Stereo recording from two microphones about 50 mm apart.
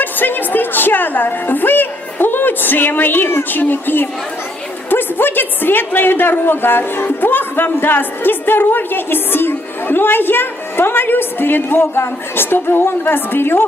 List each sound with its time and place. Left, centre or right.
0.0 s a woman's voice: left